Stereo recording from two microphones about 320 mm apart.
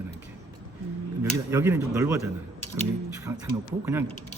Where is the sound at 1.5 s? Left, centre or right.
Centre.